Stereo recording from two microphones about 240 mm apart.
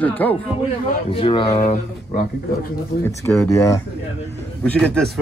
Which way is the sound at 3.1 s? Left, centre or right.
Centre.